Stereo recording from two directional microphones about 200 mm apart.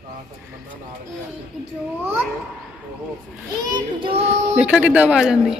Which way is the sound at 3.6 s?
25° right (ahead or behind).